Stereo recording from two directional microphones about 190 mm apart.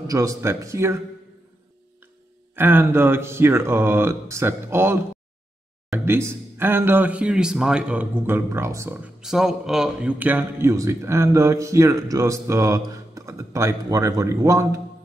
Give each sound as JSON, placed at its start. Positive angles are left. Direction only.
{"t": 0.0, "sound": "speech", "side_deg": -15}
{"t": 2.5, "sound": "speech", "side_deg": -10}